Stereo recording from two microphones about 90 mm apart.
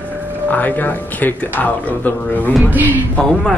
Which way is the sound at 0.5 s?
20° left (ahead or behind).